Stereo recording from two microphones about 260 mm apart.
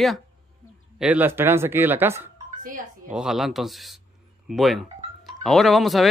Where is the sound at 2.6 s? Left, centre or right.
Right.